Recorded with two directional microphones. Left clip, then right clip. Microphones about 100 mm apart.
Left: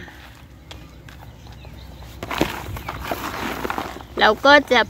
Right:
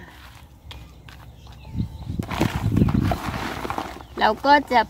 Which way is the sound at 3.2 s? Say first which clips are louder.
Left 2 dB; 40° left (ahead or behind).